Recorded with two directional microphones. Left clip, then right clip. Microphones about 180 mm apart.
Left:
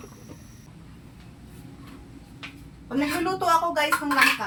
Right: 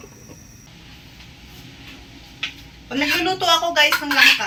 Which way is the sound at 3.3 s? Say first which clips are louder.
Even; 15° left (ahead or behind).